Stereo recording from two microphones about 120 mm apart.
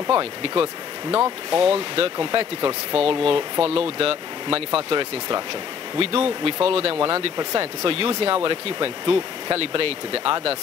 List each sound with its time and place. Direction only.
0.1 s speech: 50° right (ahead or behind)